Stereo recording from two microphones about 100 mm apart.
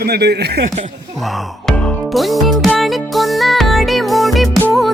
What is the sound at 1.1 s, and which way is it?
Music, centre (ahead or behind).